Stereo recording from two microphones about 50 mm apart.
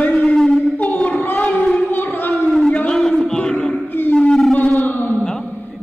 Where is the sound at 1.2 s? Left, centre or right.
Left.